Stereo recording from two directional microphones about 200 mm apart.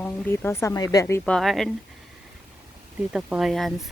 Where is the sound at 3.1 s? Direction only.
5° right (ahead or behind).